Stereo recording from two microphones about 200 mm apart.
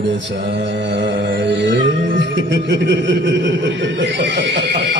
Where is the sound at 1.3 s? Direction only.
60° right (ahead or behind).